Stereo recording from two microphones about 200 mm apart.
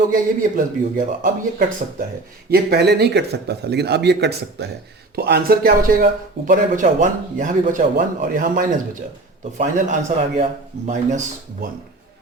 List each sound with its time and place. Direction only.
0.1 s a man's voice: 45° right (ahead or behind)